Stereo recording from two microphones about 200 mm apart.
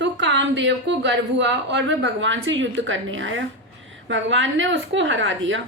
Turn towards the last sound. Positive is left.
turn(degrees=-70)  # may be behind; listen again after turning